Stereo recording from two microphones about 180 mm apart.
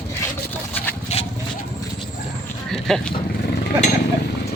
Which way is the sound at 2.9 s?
Centre (ahead or behind).